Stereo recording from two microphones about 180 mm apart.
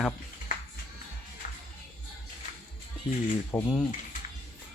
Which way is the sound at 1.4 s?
45° left (ahead or behind).